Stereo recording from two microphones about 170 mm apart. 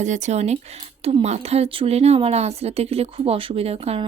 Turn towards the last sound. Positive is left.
turn(degrees=-35)  # may be behind; listen again after turning